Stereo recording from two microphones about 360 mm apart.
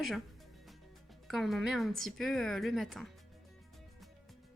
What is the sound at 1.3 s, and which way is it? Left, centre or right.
Speech, centre.